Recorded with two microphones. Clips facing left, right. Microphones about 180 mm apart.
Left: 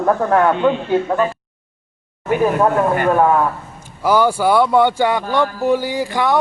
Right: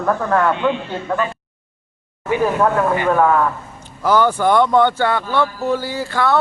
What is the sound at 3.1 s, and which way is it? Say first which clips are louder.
A man's voice: left 1 dB; 15° left (ahead or behind).